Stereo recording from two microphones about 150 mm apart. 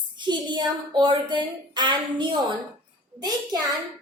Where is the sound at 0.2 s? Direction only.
30° right (ahead or behind).